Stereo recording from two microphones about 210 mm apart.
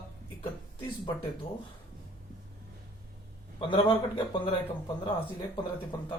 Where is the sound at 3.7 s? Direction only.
25° left (ahead or behind).